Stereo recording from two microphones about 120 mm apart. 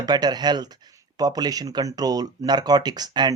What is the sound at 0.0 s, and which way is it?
Speech, 35° right (ahead or behind).